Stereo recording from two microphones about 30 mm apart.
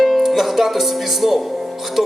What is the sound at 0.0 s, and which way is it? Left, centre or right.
Speech, centre.